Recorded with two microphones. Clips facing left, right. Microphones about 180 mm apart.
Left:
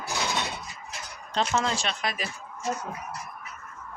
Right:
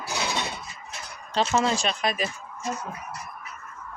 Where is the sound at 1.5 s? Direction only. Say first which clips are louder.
Right 4 dB; 10° right (ahead or behind).